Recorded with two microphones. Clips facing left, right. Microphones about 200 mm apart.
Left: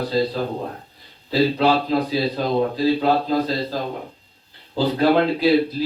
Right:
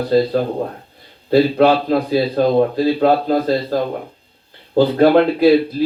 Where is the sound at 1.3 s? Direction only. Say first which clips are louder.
Right 5 dB; 50° right (ahead or behind).